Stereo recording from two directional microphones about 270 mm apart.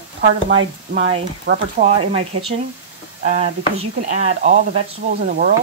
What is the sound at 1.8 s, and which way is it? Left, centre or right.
Speech, right.